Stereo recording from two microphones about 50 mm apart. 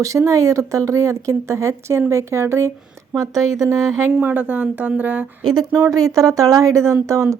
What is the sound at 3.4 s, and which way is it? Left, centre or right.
Speech, right.